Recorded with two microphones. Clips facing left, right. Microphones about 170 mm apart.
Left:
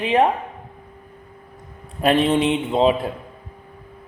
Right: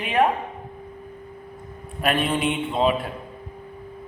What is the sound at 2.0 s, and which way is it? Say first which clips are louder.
Speech: left 6 dB; 30° left (ahead or behind).